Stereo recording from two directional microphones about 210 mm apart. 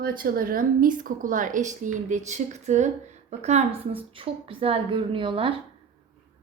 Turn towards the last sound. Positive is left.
turn(degrees=-25)  # may be behind; listen again after turning